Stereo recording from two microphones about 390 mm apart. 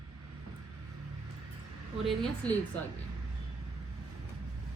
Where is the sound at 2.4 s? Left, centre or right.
Centre.